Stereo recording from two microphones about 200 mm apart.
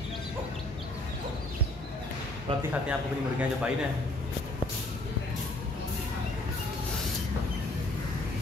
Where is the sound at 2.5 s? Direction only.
30° right (ahead or behind).